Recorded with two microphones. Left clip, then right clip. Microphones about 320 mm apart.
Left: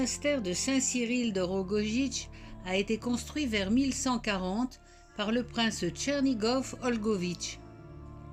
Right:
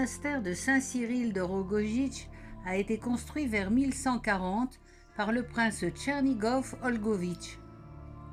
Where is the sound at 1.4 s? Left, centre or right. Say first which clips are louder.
Left 1 dB; centre.